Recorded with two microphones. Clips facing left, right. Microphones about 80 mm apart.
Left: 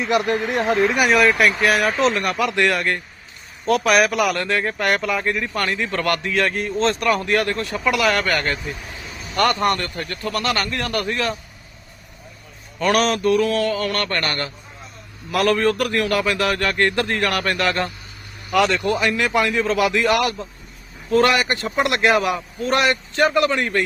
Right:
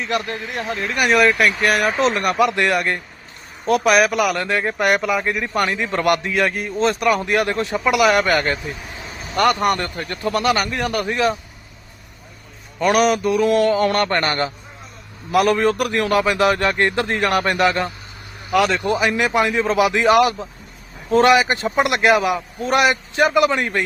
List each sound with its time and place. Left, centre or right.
0.5 s speech: left
0.9 s a man's voice: centre
12.8 s a man's voice: centre
18.5 s speech: centre
18.8 s a man's voice: centre
21.8 s a man's voice: centre